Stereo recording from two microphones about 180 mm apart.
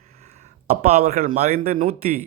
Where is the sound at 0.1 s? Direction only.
35° right (ahead or behind).